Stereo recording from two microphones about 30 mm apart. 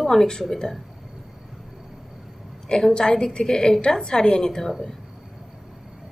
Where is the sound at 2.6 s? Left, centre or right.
Left.